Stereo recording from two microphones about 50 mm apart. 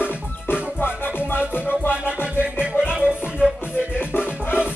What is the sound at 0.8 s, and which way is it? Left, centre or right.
Music, left.